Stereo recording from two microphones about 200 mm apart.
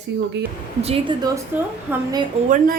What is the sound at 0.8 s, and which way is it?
Speech, 30° right (ahead or behind).